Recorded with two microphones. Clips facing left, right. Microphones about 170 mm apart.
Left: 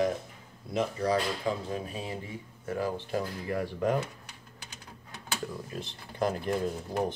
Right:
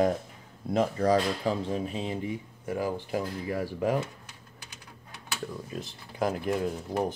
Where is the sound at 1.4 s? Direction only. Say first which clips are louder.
Right 3 dB; 30° right (ahead or behind); by 3.6 s 10° right (ahead or behind).